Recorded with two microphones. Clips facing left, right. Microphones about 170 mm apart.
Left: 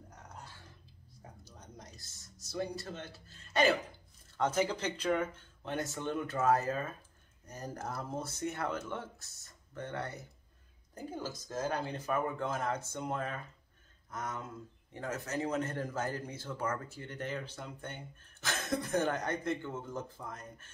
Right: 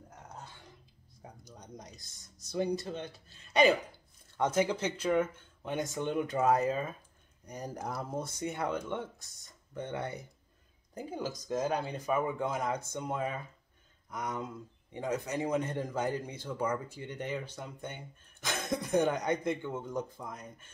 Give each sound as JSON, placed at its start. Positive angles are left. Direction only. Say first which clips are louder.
{"t": 1.4, "sound": "a sound", "louder": "right 5 dB", "side_deg": -15}
{"t": 2.0, "sound": "speech", "louder": "left 1 dB", "side_deg": 5}
{"t": 2.8, "sound": "speech", "louder": "right 5 dB", "side_deg": -15}
{"t": 4.6, "sound": "speech", "louder": "right 2 dB", "side_deg": -10}